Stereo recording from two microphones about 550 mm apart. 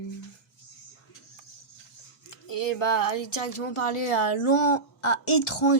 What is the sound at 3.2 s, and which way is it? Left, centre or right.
A woman's voice, left.